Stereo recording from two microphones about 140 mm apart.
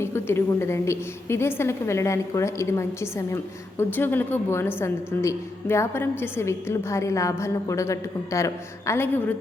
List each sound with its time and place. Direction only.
0.0 s a woman's voice: 15° left (ahead or behind)